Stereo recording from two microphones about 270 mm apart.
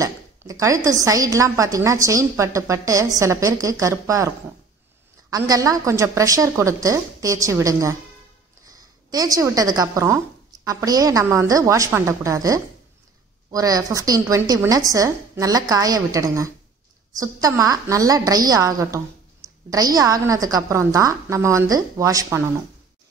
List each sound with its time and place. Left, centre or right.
0.0 s speech: centre
5.3 s a woman's voice: centre